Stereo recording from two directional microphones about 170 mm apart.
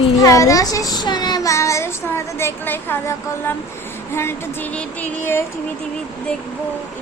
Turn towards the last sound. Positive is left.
turn(degrees=15)  # may be behind; listen again after turning